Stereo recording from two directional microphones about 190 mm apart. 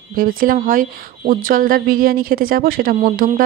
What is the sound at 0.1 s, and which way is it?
A woman's voice, 50° right (ahead or behind).